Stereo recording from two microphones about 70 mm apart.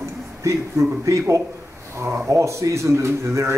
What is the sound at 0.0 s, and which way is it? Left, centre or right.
A man's voice, right.